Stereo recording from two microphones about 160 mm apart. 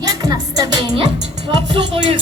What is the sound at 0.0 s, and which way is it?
Music, 25° right (ahead or behind).